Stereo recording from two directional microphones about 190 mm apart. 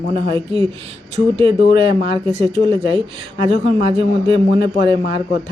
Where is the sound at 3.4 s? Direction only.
30° right (ahead or behind).